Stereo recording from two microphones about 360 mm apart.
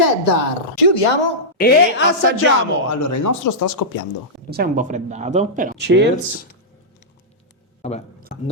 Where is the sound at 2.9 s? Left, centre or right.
Left.